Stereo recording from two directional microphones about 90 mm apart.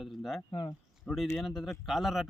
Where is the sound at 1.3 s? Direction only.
5° left (ahead or behind).